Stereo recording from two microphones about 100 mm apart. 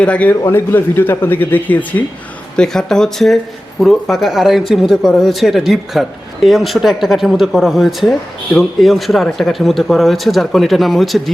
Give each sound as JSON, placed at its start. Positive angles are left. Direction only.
{"t": 0.0, "sound": "speech", "side_deg": 15}